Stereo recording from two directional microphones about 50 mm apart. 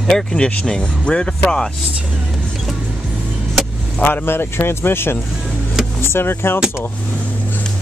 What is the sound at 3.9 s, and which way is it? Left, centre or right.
Speech, left.